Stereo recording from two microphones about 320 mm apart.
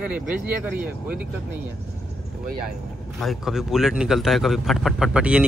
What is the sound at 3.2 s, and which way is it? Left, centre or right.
Speech, centre.